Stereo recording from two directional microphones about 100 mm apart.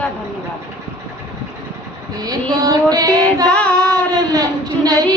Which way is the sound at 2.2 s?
40° right (ahead or behind).